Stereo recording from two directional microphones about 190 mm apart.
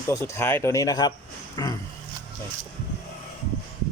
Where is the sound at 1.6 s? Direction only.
20° left (ahead or behind).